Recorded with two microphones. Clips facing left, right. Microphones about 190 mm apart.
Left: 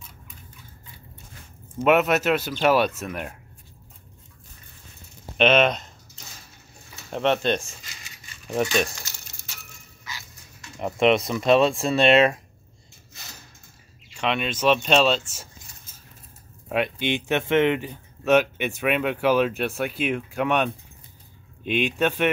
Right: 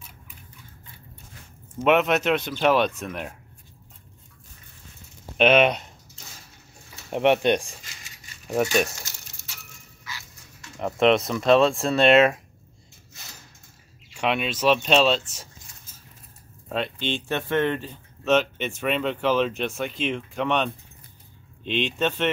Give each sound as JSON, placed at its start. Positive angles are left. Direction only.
{"t": 1.8, "sound": "speech", "side_deg": 5}
{"t": 5.4, "sound": "speech", "side_deg": -10}
{"t": 7.1, "sound": "speech", "side_deg": -15}
{"t": 10.1, "sound": "dog", "side_deg": 20}
{"t": 10.8, "sound": "speech", "side_deg": 5}
{"t": 14.1, "sound": "speech", "side_deg": -10}
{"t": 16.6, "sound": "speech", "side_deg": 10}